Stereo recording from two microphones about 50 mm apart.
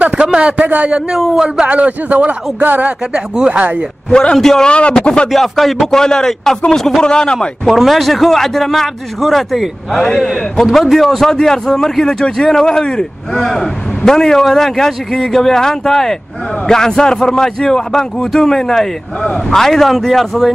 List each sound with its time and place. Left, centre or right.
0.0 s a man's voice: centre
1.1 s a man's voice: centre
1.7 s speech: right
3.1 s a man's voice: centre
3.5 s speech: right
4.1 s a man's voice: centre
4.6 s a man's voice: left
5.3 s a man's voice: centre
7.3 s a man's voice: centre